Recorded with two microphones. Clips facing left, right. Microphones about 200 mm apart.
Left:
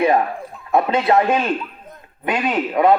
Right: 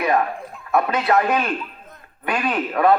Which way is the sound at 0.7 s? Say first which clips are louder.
Left 3 dB; 25° left (ahead or behind).